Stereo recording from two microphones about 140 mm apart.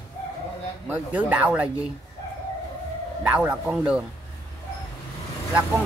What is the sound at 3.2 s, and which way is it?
Speech, 5° right (ahead or behind).